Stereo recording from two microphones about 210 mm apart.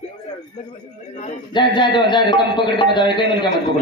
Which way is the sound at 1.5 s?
20° left (ahead or behind).